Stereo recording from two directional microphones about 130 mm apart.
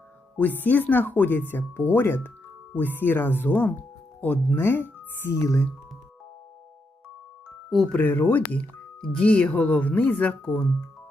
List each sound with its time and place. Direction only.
0.3 s speech: 15° left (ahead or behind)
7.9 s speech: 15° left (ahead or behind)